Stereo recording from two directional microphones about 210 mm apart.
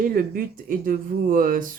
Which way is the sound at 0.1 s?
45° right (ahead or behind).